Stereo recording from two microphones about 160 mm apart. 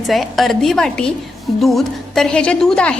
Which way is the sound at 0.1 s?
Centre (ahead or behind).